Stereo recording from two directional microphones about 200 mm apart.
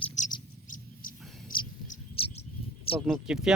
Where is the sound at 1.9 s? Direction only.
30° left (ahead or behind).